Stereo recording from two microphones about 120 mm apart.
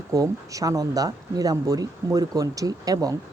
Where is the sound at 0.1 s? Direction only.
30° right (ahead or behind).